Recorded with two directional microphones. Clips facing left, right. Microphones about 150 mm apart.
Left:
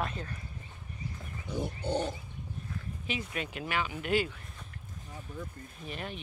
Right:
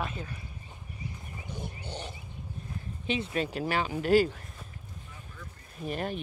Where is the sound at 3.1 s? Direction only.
30° right (ahead or behind).